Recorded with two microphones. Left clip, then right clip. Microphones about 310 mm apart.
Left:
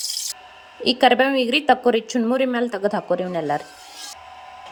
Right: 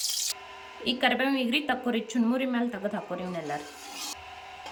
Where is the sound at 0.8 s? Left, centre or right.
Centre.